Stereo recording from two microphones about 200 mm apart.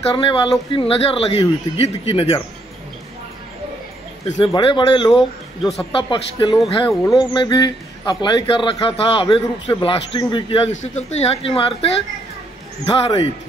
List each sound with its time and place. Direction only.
0.1 s a man's voice: 25° left (ahead or behind)
4.6 s a man's voice: 25° left (ahead or behind)
5.1 s speech: centre (ahead or behind)
5.9 s a man's voice: 25° left (ahead or behind)